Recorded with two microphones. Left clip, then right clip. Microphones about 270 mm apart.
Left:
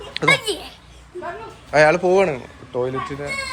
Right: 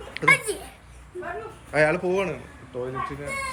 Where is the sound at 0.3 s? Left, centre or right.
Left.